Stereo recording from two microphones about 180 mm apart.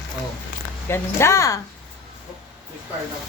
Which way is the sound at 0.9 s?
15° left (ahead or behind).